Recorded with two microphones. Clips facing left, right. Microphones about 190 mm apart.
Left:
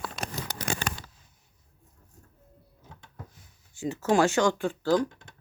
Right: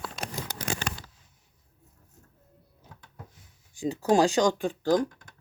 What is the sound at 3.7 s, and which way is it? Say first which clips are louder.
Speech: right 1 dB; 15° right (ahead or behind).